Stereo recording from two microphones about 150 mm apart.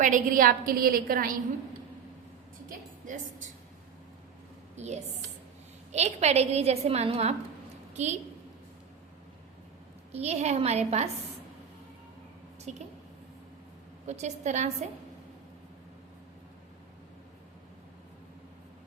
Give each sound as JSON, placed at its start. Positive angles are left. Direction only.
{"t": 0.0, "sound": "a woman's voice", "side_deg": -60}
{"t": 4.8, "sound": "a woman's voice", "side_deg": -50}
{"t": 10.1, "sound": "a woman's voice", "side_deg": -45}
{"t": 12.7, "sound": "a woman's voice", "side_deg": -50}
{"t": 14.1, "sound": "a woman's voice", "side_deg": -50}